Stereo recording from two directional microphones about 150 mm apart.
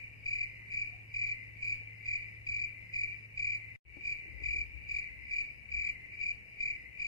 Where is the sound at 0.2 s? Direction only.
25° left (ahead or behind).